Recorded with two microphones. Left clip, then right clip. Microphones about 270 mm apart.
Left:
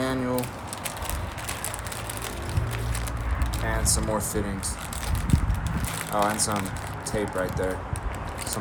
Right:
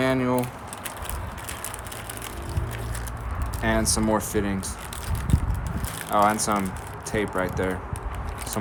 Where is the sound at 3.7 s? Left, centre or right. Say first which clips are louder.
Right 5 dB; right.